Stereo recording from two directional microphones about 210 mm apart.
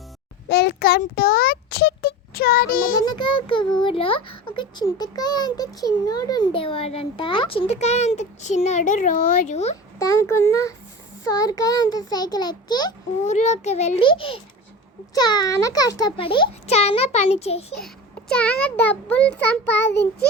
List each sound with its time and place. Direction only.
0.4 s a child's voice: 50° left (ahead or behind)
3.0 s a child's voice: 20° left (ahead or behind)
10.0 s a child's voice: 15° left (ahead or behind)
13.3 s a child's voice: 35° left (ahead or behind)
17.7 s a child's voice: 5° left (ahead or behind)
19.7 s child singing: 55° left (ahead or behind)